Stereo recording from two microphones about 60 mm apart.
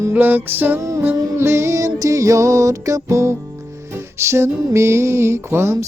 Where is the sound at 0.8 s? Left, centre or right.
Right.